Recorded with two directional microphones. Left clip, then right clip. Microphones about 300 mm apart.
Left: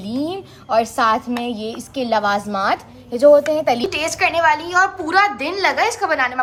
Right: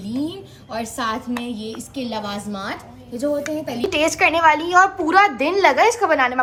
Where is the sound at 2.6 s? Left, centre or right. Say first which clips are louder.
Left 10 dB; left.